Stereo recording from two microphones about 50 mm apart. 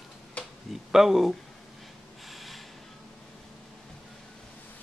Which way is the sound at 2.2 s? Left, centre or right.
Centre.